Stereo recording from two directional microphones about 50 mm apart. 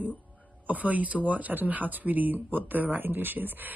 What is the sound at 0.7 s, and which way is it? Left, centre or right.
Speech, right.